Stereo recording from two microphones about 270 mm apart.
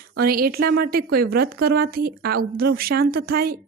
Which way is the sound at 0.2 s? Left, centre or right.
Right.